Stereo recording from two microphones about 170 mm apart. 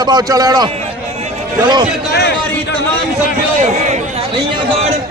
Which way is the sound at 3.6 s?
45° right (ahead or behind).